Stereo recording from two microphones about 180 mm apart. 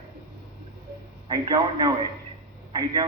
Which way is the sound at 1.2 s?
25° right (ahead or behind).